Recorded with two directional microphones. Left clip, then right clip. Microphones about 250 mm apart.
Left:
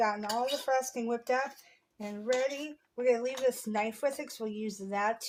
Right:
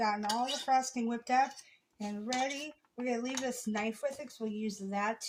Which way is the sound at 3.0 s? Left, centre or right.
Left.